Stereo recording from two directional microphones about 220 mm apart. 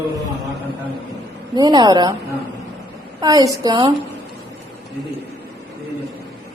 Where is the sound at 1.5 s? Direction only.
20° right (ahead or behind).